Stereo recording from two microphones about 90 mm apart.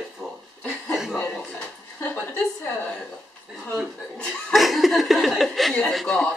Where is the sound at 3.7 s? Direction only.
Centre (ahead or behind).